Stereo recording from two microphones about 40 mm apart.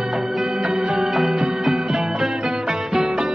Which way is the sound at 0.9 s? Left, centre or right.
Centre.